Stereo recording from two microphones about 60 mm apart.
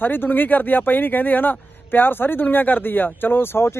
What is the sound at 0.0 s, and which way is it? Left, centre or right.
A man's voice, left.